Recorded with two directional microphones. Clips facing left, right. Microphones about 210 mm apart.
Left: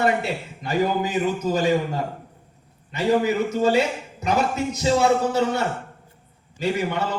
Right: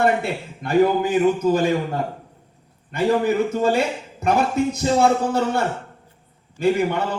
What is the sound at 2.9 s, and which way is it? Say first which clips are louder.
A man's voice: right 1 dB; 55° right (ahead or behind).